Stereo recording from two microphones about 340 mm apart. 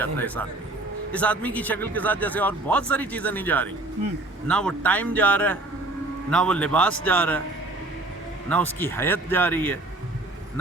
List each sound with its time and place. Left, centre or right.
0.0 s a man's voice: centre
8.4 s a man's voice: centre